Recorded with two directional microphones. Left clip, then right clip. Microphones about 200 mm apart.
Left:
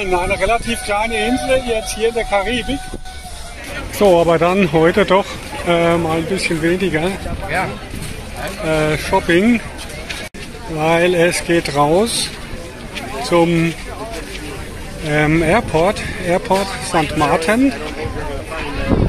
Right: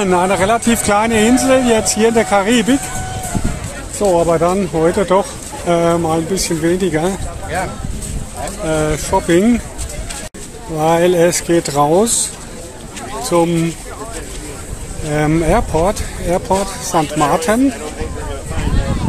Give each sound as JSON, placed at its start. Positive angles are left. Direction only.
{"t": 0.0, "sound": "speech", "side_deg": -15}
{"t": 4.0, "sound": "speech", "side_deg": 20}
{"t": 5.7, "sound": "speech", "side_deg": -20}
{"t": 8.6, "sound": "speech", "side_deg": -15}
{"t": 10.8, "sound": "speech", "side_deg": -25}
{"t": 13.3, "sound": "speech", "side_deg": -10}
{"t": 15.0, "sound": "speech", "side_deg": -10}